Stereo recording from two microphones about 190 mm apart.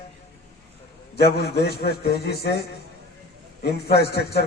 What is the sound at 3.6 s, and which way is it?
Speech, 60° left (ahead or behind).